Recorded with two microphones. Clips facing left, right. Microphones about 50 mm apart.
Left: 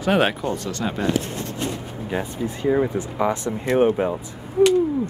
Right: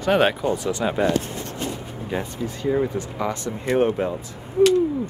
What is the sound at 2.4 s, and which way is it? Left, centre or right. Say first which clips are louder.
Speech: left 2 dB; centre.